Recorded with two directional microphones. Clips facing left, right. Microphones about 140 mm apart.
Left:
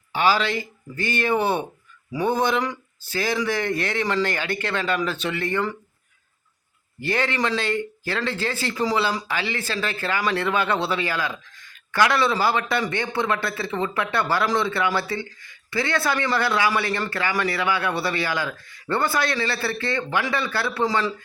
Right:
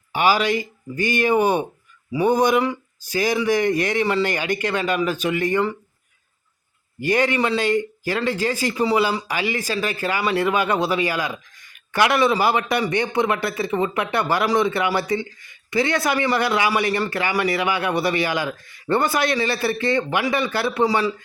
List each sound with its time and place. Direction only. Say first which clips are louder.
0.1 s speech: right 2 dB; 15° right (ahead or behind)
7.0 s speech: right 4 dB; 15° right (ahead or behind)